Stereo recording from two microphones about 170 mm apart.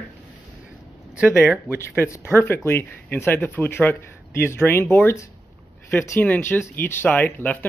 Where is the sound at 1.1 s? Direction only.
5° right (ahead or behind).